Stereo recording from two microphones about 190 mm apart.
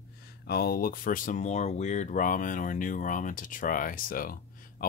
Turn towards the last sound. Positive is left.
turn(degrees=50)  # may be behind; listen again after turning